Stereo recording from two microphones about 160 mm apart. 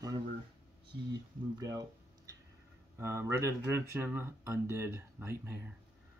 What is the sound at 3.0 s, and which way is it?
Speech, 15° right (ahead or behind).